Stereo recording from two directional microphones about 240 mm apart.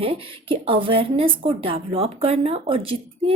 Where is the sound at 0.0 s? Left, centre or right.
Right.